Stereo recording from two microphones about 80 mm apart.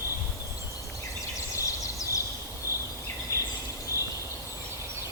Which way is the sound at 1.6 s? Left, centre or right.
Left.